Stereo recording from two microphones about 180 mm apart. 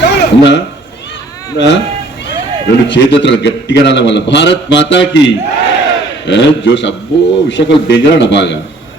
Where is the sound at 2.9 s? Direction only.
80° left.